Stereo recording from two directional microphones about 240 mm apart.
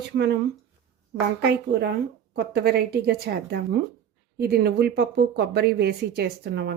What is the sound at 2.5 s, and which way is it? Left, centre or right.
Speech, right.